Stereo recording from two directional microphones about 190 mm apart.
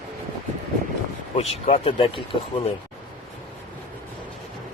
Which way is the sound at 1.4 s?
35° left (ahead or behind).